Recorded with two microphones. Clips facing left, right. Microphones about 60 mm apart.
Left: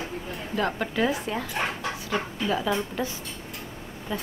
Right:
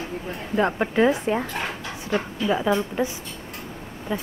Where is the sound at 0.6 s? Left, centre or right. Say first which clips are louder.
Right 6 dB; right.